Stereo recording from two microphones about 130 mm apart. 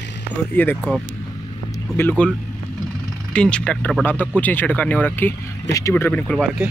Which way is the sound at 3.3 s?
10° left (ahead or behind).